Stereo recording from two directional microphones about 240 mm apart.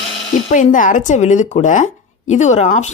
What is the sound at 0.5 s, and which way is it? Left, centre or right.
Speech, left.